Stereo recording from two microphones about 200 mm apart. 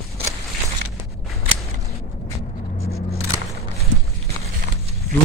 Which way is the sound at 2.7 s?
30° left (ahead or behind).